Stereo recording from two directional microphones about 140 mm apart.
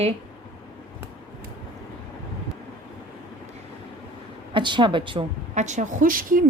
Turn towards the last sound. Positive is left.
turn(degrees=-80)